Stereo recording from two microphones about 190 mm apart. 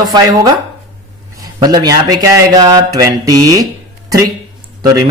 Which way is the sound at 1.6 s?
20° right (ahead or behind).